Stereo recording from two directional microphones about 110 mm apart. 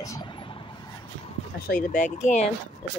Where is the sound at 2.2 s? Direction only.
90° left.